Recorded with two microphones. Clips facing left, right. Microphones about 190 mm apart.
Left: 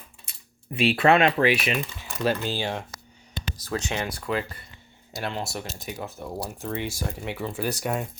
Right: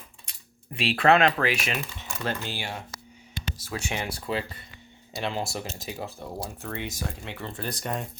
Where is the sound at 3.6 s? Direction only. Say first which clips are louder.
Left 4 dB; 10° right (ahead or behind).